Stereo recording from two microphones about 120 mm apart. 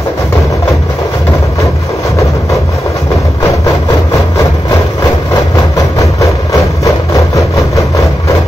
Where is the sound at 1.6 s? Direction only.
25° left (ahead or behind).